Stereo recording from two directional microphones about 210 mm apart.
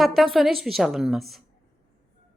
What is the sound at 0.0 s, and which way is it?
A woman's voice, centre (ahead or behind).